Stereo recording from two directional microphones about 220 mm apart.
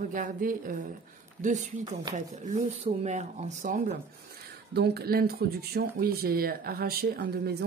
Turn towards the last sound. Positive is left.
turn(degrees=-45)  # may be behind; listen again after turning